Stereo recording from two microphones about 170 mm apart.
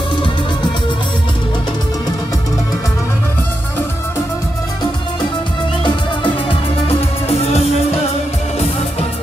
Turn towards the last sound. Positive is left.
turn(degrees=35)  # may be behind; listen again after turning